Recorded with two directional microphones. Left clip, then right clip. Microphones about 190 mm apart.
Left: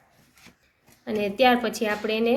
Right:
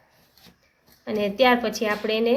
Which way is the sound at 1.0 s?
5° left (ahead or behind).